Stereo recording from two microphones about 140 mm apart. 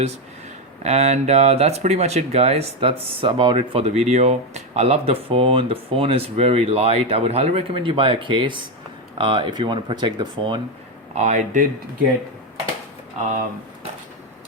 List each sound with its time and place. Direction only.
0.8 s speech: 50° right (ahead or behind)
11.1 s speech: 60° right (ahead or behind)